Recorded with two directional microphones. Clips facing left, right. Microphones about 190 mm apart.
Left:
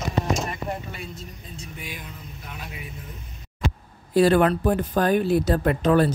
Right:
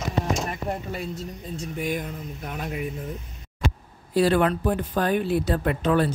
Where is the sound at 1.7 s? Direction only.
50° right (ahead or behind).